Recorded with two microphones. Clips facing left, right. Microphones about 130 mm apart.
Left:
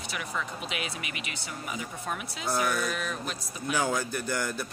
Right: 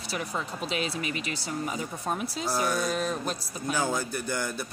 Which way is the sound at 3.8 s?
10° right (ahead or behind).